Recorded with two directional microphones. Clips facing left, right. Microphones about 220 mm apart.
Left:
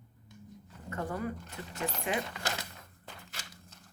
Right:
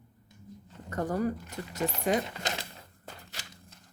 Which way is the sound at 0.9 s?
40° right (ahead or behind).